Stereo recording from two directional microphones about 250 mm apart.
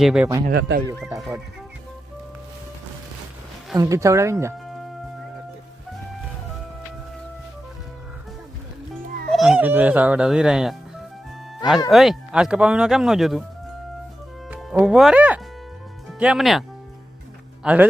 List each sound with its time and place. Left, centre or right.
0.0 s speech: centre
0.4 s speech: right
1.0 s speech: centre
3.8 s speech: centre
9.3 s speech: centre
14.5 s speech: centre